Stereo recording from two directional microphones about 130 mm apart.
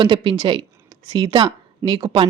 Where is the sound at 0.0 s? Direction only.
40° right (ahead or behind).